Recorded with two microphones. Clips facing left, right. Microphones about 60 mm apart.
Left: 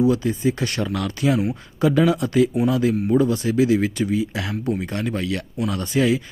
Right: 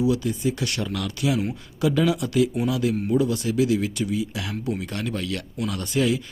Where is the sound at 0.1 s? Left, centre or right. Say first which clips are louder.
Left 3 dB; left.